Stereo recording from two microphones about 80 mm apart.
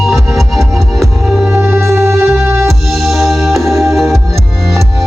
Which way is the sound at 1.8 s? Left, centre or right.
Right.